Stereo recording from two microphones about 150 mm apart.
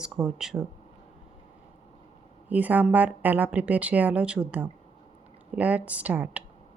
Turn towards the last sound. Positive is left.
turn(degrees=-10)  # may be behind; listen again after turning